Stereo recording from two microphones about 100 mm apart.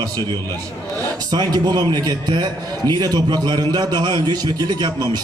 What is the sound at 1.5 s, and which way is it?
A man's voice, 45° right (ahead or behind).